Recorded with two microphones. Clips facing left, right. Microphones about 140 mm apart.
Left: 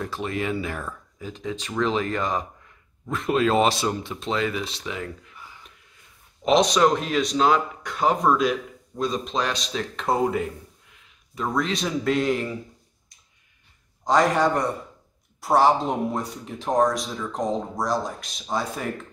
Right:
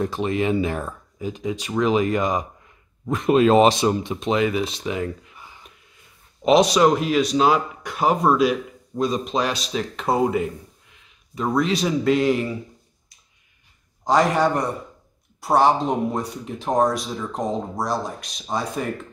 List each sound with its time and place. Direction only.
0.0 s speech: 20° right (ahead or behind)
6.4 s speech: 10° right (ahead or behind)
14.0 s speech: centre (ahead or behind)